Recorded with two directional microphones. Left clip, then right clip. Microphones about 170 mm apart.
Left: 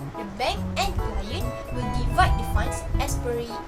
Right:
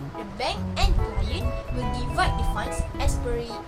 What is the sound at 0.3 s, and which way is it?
Music, 10° left (ahead or behind).